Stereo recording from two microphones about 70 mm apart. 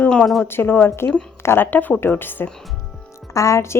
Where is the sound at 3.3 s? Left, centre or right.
Left.